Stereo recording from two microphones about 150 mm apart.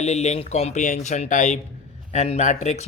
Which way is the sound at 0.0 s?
50° left (ahead or behind).